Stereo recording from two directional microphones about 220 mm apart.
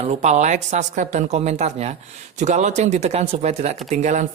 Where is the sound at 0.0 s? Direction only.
30° right (ahead or behind).